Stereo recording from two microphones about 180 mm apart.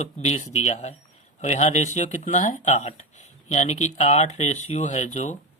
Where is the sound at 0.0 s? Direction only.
40° left (ahead or behind).